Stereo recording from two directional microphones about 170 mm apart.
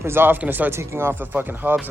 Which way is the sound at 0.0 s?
15° right (ahead or behind).